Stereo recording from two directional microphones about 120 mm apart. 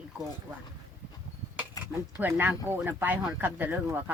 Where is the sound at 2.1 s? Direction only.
20° right (ahead or behind).